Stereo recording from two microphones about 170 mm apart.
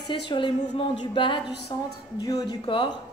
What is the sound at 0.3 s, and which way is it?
Music, 25° left (ahead or behind).